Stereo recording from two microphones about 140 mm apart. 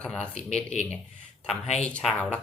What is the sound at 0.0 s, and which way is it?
Speech, 5° left (ahead or behind).